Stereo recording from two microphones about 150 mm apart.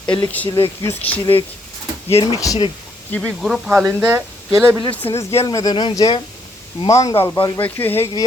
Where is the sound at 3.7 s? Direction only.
10° right (ahead or behind).